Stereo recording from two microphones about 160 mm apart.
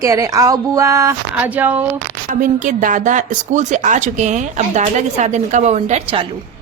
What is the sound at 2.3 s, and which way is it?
Speech, 55° right (ahead or behind).